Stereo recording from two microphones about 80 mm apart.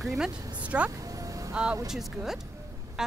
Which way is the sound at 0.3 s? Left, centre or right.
Right.